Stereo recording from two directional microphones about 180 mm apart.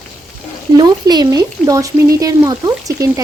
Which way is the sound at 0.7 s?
25° right (ahead or behind).